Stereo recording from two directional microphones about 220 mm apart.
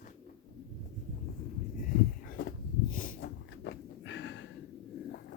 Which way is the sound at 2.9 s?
40° left (ahead or behind).